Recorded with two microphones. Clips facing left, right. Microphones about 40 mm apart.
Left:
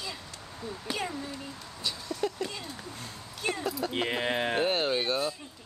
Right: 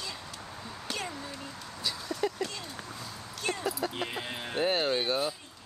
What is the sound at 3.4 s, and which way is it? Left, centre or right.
Speech, centre.